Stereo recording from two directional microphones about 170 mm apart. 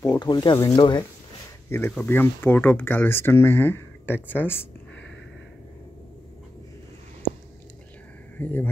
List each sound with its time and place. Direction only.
0.0 s speech: 25° left (ahead or behind)
1.7 s speech: 10° left (ahead or behind)
8.4 s speech: 10° left (ahead or behind)